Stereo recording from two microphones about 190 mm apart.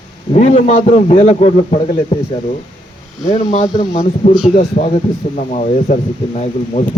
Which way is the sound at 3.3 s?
40° left (ahead or behind).